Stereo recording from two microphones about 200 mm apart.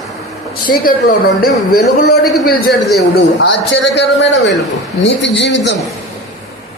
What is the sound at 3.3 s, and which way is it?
Speech, 65° left (ahead or behind).